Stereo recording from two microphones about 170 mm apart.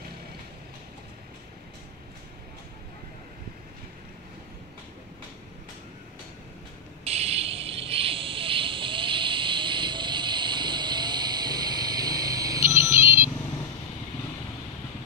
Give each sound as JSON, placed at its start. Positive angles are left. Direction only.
{"t": 7.1, "sound": "vehicle", "side_deg": -35}